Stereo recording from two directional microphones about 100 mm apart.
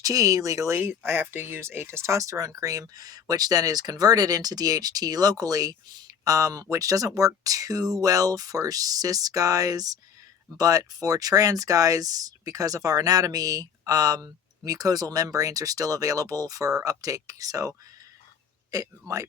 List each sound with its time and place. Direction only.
0.0 s speech: 35° right (ahead or behind)